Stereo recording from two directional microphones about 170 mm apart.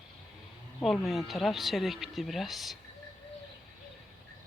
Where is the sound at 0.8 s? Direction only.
5° left (ahead or behind).